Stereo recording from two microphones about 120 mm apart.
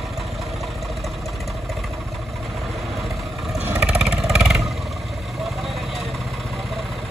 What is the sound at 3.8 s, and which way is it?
Vehicle, 5° right (ahead or behind).